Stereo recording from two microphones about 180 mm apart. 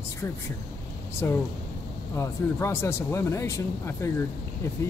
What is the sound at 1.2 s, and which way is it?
Speech, 15° left (ahead or behind).